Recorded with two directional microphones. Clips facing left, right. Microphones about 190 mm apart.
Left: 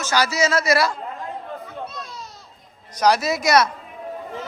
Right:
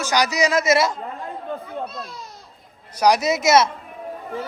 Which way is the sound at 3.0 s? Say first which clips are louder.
Right 1 dB; 15° right (ahead or behind).